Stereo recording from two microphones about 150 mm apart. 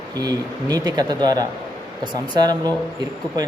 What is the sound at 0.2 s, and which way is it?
A man's voice, 25° right (ahead or behind).